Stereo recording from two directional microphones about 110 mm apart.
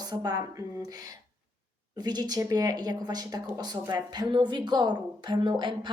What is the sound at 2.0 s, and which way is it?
Speech, 40° right (ahead or behind).